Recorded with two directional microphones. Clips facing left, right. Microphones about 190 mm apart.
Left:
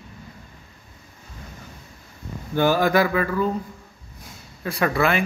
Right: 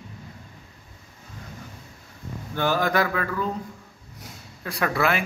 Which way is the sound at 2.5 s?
10° left (ahead or behind).